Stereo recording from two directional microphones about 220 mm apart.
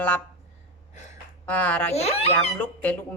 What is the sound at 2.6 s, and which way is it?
Speech, 5° left (ahead or behind).